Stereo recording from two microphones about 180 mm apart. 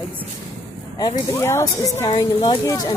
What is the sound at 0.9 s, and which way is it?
Speech, 20° left (ahead or behind).